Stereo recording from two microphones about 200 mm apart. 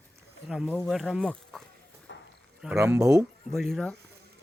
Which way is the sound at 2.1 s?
60° left (ahead or behind).